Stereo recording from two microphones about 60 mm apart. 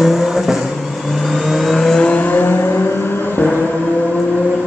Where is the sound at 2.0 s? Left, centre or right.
Left.